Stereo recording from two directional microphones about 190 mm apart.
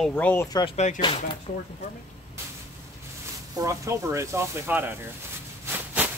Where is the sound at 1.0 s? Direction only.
25° left (ahead or behind).